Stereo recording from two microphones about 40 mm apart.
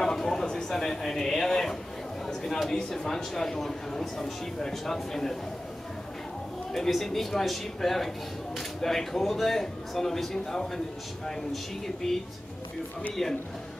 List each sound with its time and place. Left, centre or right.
0.0 s a sound: centre
2.7 s speech: centre
6.7 s a man's voice: centre